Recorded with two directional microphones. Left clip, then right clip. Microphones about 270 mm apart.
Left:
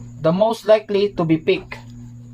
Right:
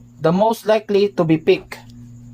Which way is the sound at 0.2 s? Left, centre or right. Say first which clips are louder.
Right 1 dB; right.